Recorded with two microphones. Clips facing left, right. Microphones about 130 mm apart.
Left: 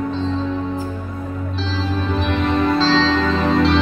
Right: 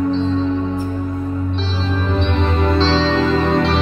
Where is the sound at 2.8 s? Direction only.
25° right (ahead or behind).